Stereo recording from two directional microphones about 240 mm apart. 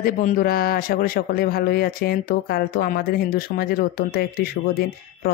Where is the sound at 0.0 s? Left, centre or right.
Left.